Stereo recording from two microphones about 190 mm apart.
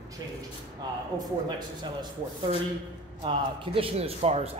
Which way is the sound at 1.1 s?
25° right (ahead or behind).